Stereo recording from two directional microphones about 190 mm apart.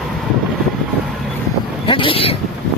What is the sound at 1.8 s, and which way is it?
Vehicle, 25° left (ahead or behind).